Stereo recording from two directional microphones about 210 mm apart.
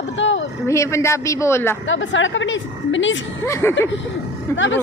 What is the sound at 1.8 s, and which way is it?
A woman's voice, 65° left (ahead or behind).